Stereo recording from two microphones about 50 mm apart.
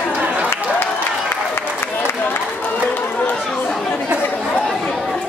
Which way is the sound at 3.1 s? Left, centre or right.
Left.